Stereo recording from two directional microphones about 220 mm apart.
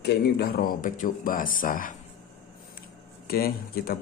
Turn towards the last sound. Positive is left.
turn(degrees=45)  # may be behind; listen again after turning